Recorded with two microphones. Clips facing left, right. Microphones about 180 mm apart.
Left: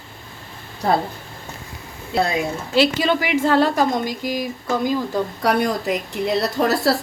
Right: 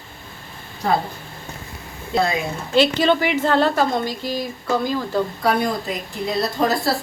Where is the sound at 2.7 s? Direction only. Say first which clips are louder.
Right 2 dB; 5° left (ahead or behind).